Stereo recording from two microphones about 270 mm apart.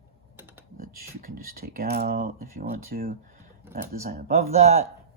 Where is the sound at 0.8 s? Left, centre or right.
Right.